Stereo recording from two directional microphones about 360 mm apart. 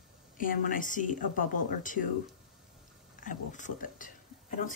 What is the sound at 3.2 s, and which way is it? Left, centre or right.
Speech, left.